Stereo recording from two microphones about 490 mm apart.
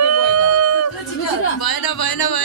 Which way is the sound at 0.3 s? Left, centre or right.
Right.